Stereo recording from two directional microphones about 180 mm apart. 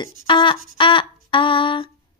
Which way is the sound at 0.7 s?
30° left (ahead or behind).